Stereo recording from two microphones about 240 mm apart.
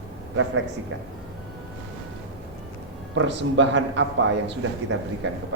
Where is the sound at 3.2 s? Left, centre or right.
Right.